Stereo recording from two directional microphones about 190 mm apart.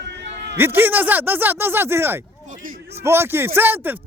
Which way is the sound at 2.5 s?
45° right (ahead or behind).